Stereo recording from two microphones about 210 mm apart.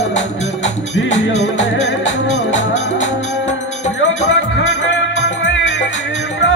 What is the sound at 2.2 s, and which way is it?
Music, 60° left (ahead or behind).